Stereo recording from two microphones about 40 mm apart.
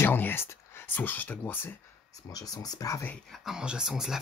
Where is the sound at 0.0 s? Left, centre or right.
Left.